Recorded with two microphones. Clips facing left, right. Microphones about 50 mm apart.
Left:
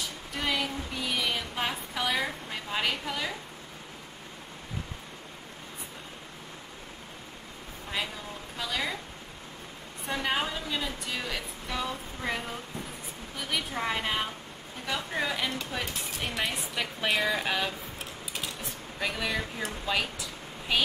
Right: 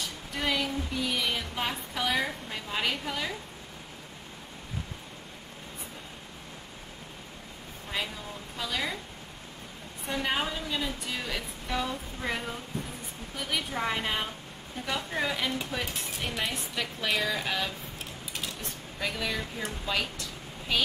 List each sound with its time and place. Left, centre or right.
0.0 s a sound: centre
8.5 s a woman's voice: centre
10.2 s a woman's voice: centre